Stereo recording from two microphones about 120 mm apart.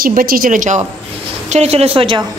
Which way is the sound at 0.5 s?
90° right.